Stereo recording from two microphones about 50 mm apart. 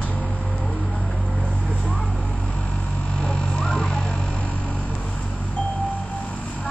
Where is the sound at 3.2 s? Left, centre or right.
Centre.